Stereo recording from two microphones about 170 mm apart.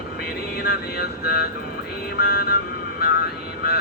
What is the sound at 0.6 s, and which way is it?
Speech, 70° left (ahead or behind).